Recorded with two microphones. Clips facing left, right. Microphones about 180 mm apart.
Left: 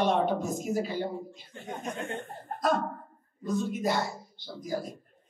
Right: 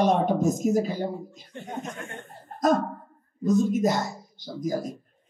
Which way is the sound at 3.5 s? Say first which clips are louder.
Right 7 dB; 45° right (ahead or behind).